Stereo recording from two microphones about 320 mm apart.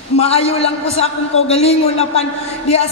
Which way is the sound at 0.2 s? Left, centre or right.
Centre.